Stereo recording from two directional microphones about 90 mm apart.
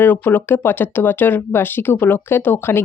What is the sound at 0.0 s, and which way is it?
Speech, 20° left (ahead or behind).